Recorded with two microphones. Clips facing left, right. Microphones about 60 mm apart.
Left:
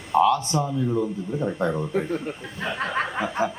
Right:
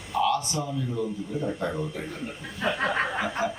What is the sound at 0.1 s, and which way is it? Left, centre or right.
Speech, left.